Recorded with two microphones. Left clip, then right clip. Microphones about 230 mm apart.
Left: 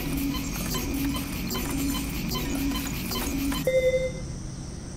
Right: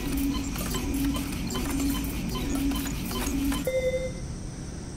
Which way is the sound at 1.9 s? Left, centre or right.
Centre.